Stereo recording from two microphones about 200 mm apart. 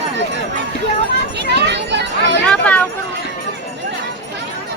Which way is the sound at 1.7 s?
60° right (ahead or behind).